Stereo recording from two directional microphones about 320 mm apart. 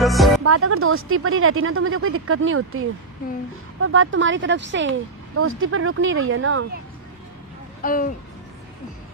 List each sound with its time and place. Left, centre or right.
0.0 s music: centre
0.4 s speech: right
7.8 s speech: left